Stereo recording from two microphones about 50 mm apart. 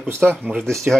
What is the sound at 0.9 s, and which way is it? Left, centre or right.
Speech, right.